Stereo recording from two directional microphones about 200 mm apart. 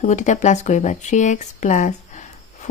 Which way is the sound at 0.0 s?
35° left (ahead or behind).